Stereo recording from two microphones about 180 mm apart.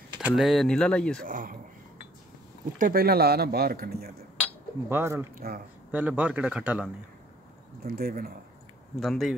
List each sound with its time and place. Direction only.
0.2 s speech: centre (ahead or behind)
1.2 s speech: 50° right (ahead or behind)
2.8 s speech: 55° right (ahead or behind)
4.8 s speech: 15° right (ahead or behind)
7.8 s speech: 55° right (ahead or behind)
8.9 s speech: centre (ahead or behind)